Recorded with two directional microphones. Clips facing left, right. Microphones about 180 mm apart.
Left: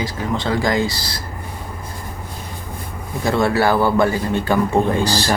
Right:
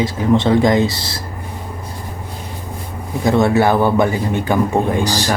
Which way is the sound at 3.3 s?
20° right (ahead or behind).